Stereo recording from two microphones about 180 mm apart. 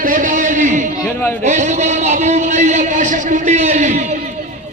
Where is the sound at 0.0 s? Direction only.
50° right (ahead or behind).